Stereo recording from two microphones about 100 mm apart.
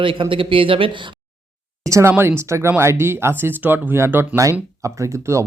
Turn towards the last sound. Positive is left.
turn(degrees=-30)  # may be behind; listen again after turning